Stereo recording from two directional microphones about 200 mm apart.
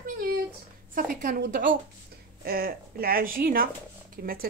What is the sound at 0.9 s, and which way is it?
Speech, 40° right (ahead or behind).